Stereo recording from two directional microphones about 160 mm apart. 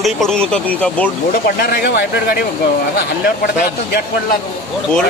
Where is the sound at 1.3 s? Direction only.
75° left (ahead or behind).